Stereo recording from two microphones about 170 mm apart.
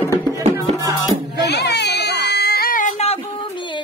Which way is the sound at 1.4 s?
80° left.